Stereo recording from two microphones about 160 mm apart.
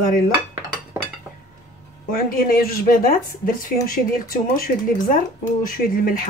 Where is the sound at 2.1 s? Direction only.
65° left (ahead or behind).